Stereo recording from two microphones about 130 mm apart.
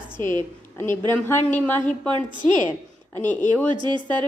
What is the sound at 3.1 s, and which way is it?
Speech, 15° left (ahead or behind).